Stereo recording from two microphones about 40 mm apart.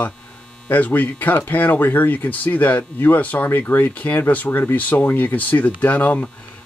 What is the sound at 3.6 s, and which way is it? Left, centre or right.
Speech, left.